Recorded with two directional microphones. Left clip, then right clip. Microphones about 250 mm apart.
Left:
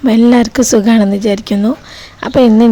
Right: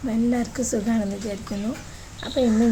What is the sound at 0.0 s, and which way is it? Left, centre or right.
Speech, left.